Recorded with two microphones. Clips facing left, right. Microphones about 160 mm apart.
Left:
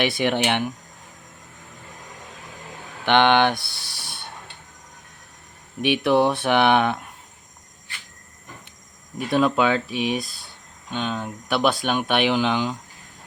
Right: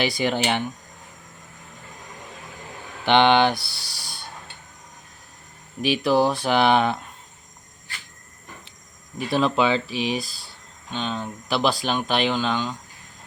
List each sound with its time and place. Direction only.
0.2 s speech: 65° left (ahead or behind)
3.2 s speech: 10° right (ahead or behind)
3.5 s speech: 20° left (ahead or behind)
5.8 s speech: 60° left (ahead or behind)
6.1 s speech: centre (ahead or behind)
9.1 s speech: centre (ahead or behind)
9.9 s speech: 55° left (ahead or behind)
10.2 s speech: centre (ahead or behind)